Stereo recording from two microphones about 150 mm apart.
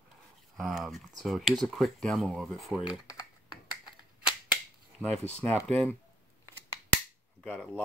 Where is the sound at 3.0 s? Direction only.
25° left (ahead or behind).